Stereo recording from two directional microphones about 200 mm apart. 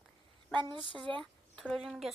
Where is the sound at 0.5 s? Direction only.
25° right (ahead or behind).